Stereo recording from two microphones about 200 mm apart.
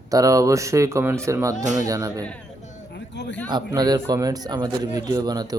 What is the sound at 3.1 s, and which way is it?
Speech, 60° left (ahead or behind).